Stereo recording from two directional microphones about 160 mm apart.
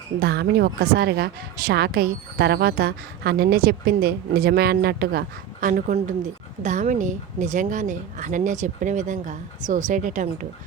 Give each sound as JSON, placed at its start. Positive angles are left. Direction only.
{"t": 0.2, "sound": "a woman's voice", "side_deg": -90}